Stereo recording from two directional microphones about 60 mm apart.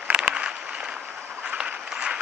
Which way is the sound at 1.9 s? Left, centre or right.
Centre.